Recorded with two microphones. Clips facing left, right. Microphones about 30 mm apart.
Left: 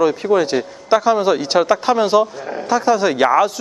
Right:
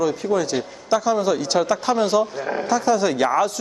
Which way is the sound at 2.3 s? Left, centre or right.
Centre.